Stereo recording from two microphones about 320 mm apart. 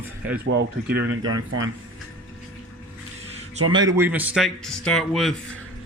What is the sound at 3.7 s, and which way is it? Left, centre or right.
Speech, centre.